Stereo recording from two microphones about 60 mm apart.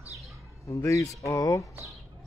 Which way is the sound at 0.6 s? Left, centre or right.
Left.